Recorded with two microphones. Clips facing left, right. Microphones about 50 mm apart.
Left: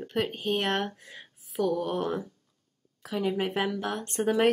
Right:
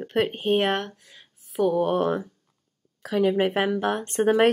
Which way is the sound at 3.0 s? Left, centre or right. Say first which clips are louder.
Right 7 dB; right.